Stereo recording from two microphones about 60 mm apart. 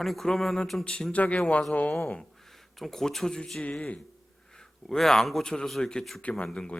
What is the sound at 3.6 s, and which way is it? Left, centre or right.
Speech, left.